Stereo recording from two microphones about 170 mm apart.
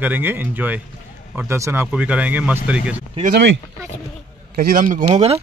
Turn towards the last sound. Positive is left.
turn(degrees=-55)  # may be behind; listen again after turning